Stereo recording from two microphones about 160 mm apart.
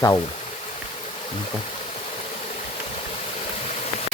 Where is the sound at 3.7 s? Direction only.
45° left (ahead or behind).